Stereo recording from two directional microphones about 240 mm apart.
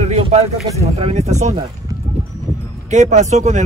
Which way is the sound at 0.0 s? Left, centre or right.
Right.